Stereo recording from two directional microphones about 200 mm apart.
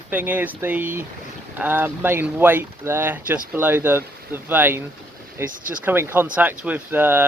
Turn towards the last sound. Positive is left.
turn(degrees=-10)  # may be behind; listen again after turning